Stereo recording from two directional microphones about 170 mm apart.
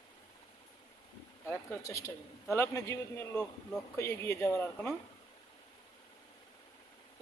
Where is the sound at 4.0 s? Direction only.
15° left (ahead or behind).